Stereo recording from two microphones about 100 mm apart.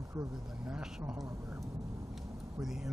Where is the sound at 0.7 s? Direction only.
10° right (ahead or behind).